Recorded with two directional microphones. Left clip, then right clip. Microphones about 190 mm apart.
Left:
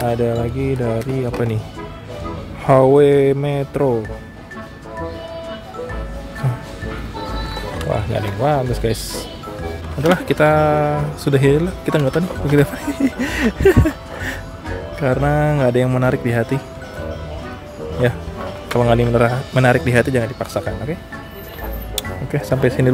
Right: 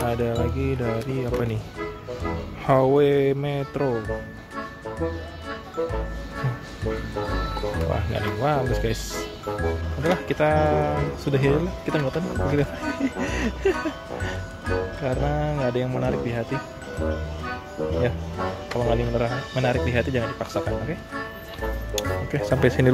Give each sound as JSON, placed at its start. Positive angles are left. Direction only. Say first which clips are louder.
{"t": 0.0, "sound": "speech", "louder": "left 6 dB", "side_deg": 5}
{"t": 2.6, "sound": "speech", "louder": "left 7 dB", "side_deg": 5}
{"t": 7.9, "sound": "speech", "louder": "left 5 dB", "side_deg": 5}
{"t": 10.0, "sound": "speech", "louder": "left 7 dB", "side_deg": 10}
{"t": 18.0, "sound": "speech", "louder": "left 6 dB", "side_deg": 15}
{"t": 21.9, "sound": "music", "louder": "left 3 dB", "side_deg": 0}